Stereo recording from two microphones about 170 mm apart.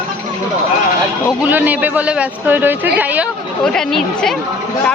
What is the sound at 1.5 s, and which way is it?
A man's voice, 10° right (ahead or behind).